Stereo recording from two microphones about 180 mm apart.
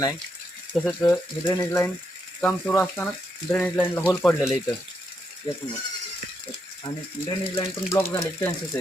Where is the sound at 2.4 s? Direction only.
5° left (ahead or behind).